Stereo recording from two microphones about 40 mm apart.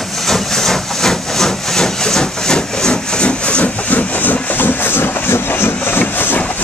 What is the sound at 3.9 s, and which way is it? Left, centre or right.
Vehicle, left.